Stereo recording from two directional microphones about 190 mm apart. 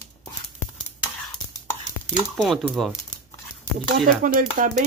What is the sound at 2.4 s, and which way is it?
Speech, centre (ahead or behind).